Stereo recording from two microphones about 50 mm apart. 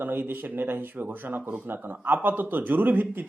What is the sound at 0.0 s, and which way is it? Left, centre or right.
Speech, right.